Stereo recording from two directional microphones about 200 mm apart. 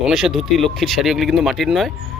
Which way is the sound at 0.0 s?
Centre (ahead or behind).